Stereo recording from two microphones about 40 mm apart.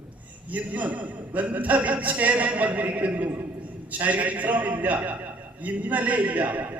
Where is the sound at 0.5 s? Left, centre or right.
Right.